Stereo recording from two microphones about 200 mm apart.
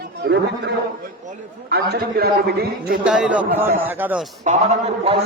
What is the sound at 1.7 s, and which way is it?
A man's voice, 55° right (ahead or behind).